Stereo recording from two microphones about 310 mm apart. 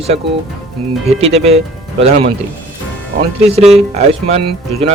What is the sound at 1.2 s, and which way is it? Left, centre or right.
Speech, centre.